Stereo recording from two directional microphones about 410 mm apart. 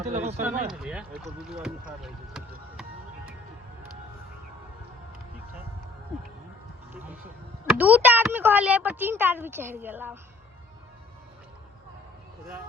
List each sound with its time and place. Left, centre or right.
0.1 s speech: centre
0.7 s speech: centre
2.0 s vehicle: centre
6.9 s speech: centre